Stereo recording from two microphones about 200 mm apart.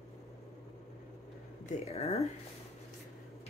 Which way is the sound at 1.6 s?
30° left (ahead or behind).